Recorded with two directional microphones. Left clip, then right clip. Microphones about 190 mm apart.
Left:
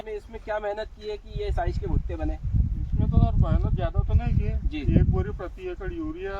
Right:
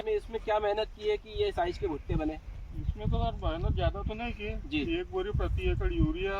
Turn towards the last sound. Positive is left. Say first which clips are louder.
# even
turn(degrees=0)  # may be behind; listen again after turning